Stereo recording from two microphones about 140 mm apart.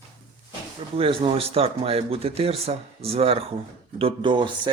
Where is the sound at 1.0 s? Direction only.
40° right (ahead or behind).